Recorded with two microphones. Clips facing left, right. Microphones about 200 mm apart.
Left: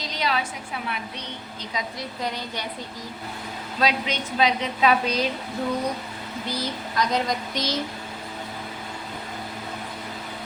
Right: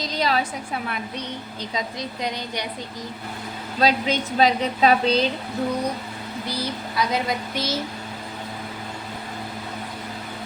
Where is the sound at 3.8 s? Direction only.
40° right (ahead or behind).